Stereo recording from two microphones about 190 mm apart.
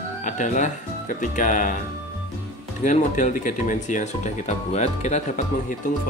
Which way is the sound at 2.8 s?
40° left (ahead or behind).